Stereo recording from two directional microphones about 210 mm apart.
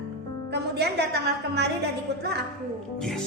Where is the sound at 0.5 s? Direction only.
55° right (ahead or behind).